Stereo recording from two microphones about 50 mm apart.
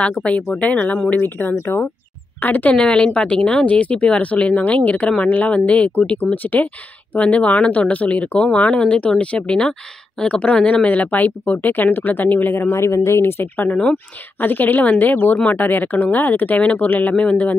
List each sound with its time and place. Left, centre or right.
0.0 s speech: centre
0.6 s speech: left
1.5 s speech: left
2.4 s speech: left
2.7 s speech: centre; by 13.5 s left
14.4 s speech: left